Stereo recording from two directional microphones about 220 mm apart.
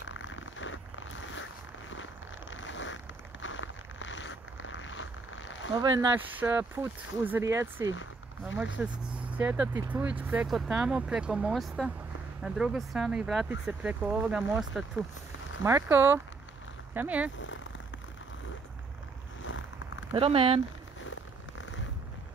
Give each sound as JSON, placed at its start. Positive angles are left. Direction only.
{"t": 0.0, "sound": "zipper", "side_deg": 60}
{"t": 2.5, "sound": "vehicle", "side_deg": 55}
{"t": 3.4, "sound": "a sound", "side_deg": 60}
{"t": 5.8, "sound": "speech", "side_deg": -15}
{"t": 20.1, "sound": "speech", "side_deg": -25}
{"t": 21.0, "sound": "zipper", "side_deg": 60}